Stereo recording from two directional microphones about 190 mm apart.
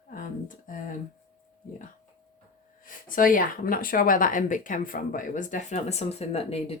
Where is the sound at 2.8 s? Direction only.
45° left (ahead or behind).